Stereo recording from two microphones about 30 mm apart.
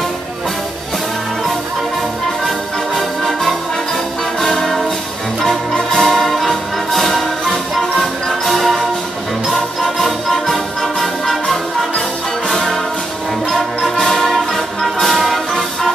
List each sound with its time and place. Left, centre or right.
2.4 s music: centre
12.4 s music: left
13.9 s music: centre